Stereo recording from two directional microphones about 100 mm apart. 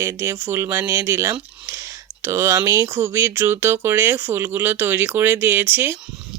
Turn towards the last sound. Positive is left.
turn(degrees=-20)  # may be behind; listen again after turning